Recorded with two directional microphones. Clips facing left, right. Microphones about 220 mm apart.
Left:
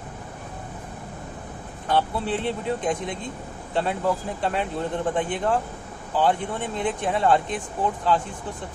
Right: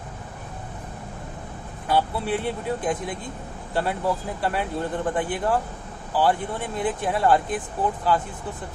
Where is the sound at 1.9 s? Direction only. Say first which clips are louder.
Even; 5° right (ahead or behind).